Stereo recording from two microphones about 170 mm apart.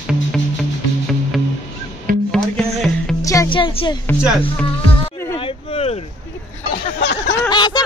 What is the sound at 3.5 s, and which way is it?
Music, 30° left (ahead or behind).